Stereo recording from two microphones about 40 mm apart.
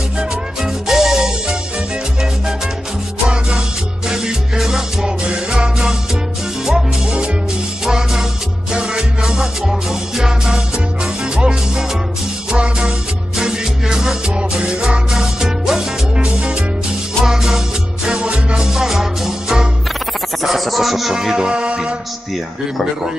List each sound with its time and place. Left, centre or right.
0.6 s music: centre
3.3 s music: right
4.1 s music: centre
6.6 s music: centre
17.2 s music: centre
18.1 s music: right
18.6 s music: centre
21.1 s music: centre